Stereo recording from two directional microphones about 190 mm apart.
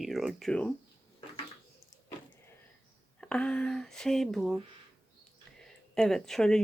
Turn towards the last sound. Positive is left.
turn(degrees=5)  # may be behind; listen again after turning